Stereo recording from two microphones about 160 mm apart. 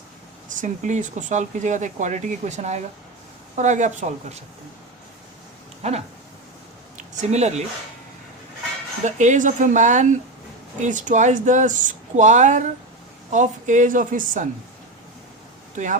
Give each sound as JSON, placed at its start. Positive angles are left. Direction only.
{"t": 0.4, "sound": "speech", "side_deg": -55}
{"t": 5.8, "sound": "speech", "side_deg": -40}
{"t": 9.0, "sound": "speech", "side_deg": -50}
{"t": 15.7, "sound": "speech", "side_deg": -50}